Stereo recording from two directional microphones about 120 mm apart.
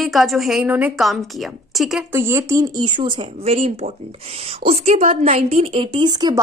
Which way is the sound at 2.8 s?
40° right (ahead or behind).